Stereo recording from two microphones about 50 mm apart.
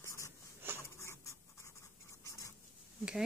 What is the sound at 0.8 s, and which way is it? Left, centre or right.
Scratch, left.